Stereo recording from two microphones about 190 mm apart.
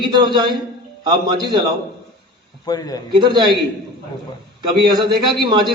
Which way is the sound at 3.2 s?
25° right (ahead or behind).